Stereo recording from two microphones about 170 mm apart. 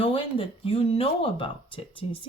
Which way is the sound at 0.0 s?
35° left (ahead or behind).